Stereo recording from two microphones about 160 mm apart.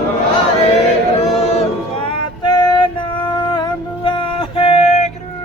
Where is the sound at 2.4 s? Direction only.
25° left (ahead or behind); by 5.1 s 40° left (ahead or behind).